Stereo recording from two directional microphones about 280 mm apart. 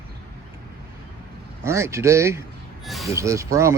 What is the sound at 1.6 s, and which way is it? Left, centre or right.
Speech, centre.